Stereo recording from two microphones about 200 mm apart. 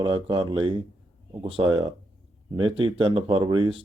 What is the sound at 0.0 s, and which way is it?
Speech, 25° right (ahead or behind).